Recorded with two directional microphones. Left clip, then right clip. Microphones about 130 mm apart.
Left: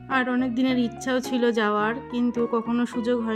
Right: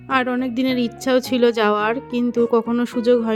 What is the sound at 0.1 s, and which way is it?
A woman's voice, 50° right (ahead or behind).